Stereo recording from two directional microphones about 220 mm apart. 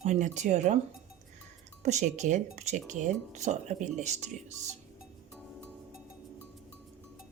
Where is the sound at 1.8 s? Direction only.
30° right (ahead or behind).